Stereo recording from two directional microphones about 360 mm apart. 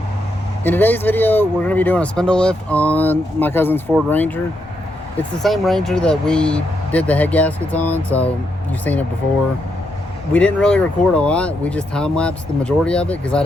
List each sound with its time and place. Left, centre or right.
0.6 s speech: centre
5.4 s speech: centre
10.3 s speech: centre